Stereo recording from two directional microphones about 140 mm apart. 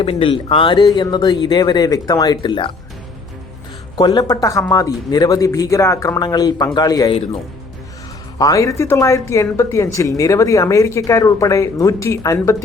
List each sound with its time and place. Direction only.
0.0 s speech: 40° left (ahead or behind)
3.9 s speech: 30° left (ahead or behind)
8.4 s speech: 25° left (ahead or behind)